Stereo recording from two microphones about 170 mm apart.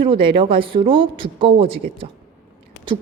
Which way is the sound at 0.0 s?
30° right (ahead or behind).